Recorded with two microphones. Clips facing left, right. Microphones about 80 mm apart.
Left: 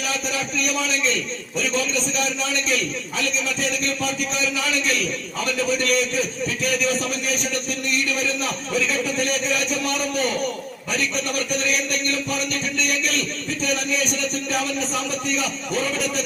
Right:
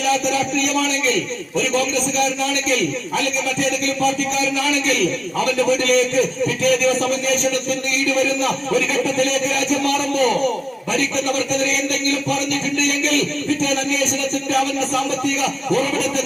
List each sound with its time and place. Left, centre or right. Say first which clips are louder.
1.5 s a man's voice: right 4 dB; centre
5.8 s a man's voice: right 5 dB; centre
15.4 s a man's voice: right 6 dB; centre